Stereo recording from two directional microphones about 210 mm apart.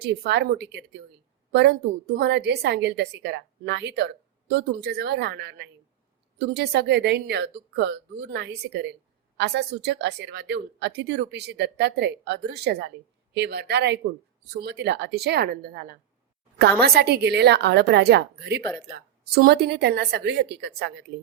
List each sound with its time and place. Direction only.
0.0 s a woman's voice: 50° right (ahead or behind)